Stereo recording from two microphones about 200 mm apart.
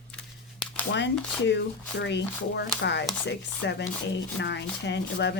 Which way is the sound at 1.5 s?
60° left (ahead or behind).